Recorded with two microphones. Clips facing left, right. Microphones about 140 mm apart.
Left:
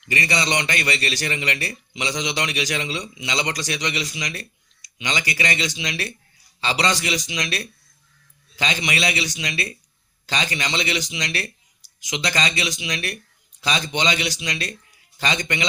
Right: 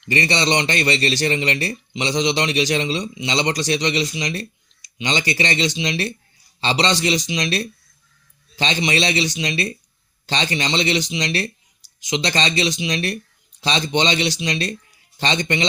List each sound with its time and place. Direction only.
0.0 s a man's voice: 30° right (ahead or behind)